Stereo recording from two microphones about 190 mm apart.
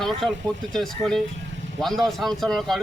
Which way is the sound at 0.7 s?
5° left (ahead or behind).